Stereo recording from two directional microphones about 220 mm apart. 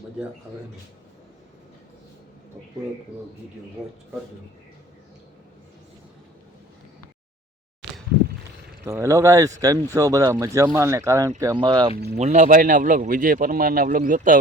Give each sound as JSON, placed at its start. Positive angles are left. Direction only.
{"t": 3.8, "sound": "speech", "side_deg": 0}
{"t": 8.8, "sound": "speech", "side_deg": -10}
{"t": 11.9, "sound": "speech", "side_deg": -45}
{"t": 12.2, "sound": "speech", "side_deg": -35}